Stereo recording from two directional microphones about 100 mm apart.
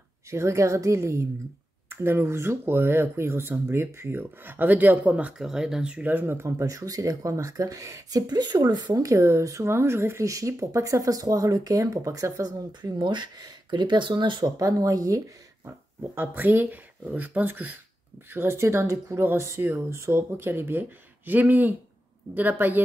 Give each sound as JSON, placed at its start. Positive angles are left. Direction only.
{"t": 0.3, "sound": "speech", "side_deg": -30}
{"t": 6.6, "sound": "speech", "side_deg": -35}
{"t": 14.6, "sound": "speech", "side_deg": -35}
{"t": 16.2, "sound": "speech", "side_deg": -20}